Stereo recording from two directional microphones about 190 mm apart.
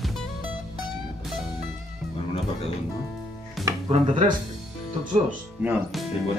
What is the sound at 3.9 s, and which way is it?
Speech, 40° right (ahead or behind).